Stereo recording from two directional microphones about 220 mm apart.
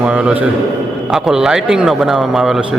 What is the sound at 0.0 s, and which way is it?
A man's voice, 5° right (ahead or behind).